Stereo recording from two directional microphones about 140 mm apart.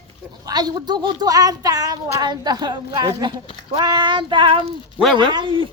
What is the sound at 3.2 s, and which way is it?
Child singing, 30° right (ahead or behind).